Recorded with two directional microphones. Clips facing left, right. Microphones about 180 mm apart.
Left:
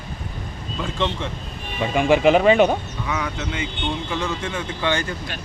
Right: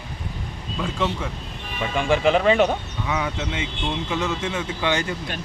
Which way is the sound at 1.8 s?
10° left (ahead or behind).